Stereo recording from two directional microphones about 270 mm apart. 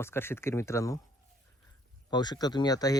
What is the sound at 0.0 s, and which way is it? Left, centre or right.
Speech, centre.